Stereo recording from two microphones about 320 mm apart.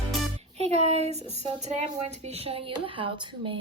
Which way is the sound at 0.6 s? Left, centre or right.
Centre.